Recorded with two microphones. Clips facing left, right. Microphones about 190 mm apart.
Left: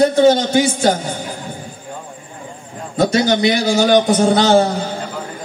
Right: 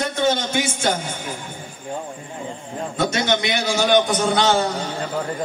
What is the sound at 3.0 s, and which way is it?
A man's voice, 35° left (ahead or behind).